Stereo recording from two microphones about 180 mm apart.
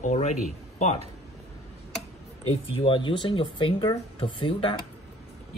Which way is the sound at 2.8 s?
30° left (ahead or behind).